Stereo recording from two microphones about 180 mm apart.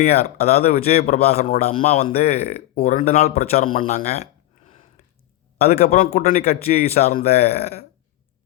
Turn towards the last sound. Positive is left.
turn(degrees=35)  # may be behind; listen again after turning